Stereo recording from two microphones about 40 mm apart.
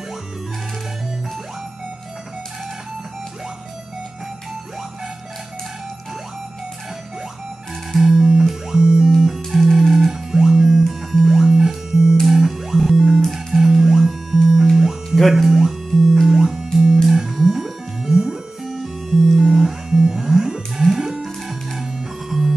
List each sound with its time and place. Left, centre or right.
7.9 s music: centre
10.1 s music: centre
15.3 s guitar: centre
16.3 s music: centre